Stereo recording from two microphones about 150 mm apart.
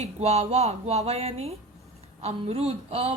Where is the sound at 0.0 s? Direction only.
45° right (ahead or behind).